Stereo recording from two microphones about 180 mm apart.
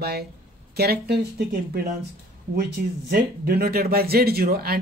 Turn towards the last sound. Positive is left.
turn(degrees=-55)  # may be behind; listen again after turning